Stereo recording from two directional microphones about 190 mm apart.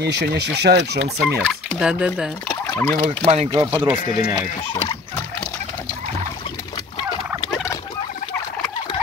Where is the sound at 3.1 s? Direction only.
35° right (ahead or behind).